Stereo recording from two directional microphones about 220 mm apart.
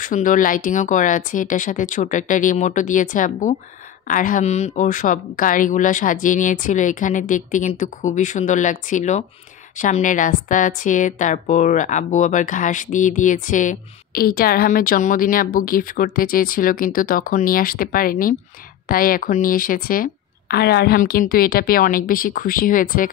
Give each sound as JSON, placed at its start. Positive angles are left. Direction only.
{"t": 0.0, "sound": "speech", "side_deg": 35}